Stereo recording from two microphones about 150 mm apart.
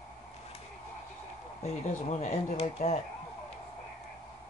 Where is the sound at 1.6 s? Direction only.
50° left (ahead or behind).